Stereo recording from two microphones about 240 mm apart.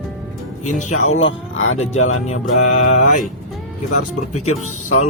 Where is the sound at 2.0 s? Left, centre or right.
Left.